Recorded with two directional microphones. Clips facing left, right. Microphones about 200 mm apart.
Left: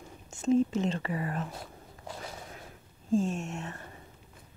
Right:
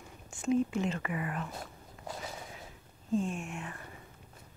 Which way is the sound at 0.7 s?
35° left (ahead or behind).